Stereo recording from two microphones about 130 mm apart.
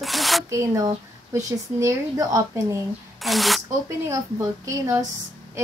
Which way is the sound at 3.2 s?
Centre (ahead or behind).